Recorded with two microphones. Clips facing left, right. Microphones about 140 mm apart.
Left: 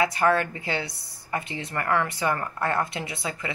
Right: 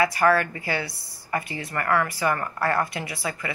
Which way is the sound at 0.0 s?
20° left (ahead or behind).